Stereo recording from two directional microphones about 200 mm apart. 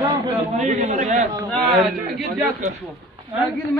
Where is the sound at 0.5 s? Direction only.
35° right (ahead or behind).